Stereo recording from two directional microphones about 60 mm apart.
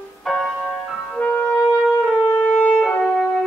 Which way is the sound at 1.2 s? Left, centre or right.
Centre.